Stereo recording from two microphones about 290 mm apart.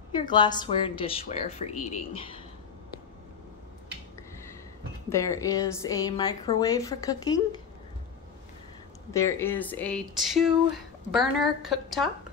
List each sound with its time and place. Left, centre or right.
0.1 s speech: centre
5.1 s speech: centre
9.1 s speech: centre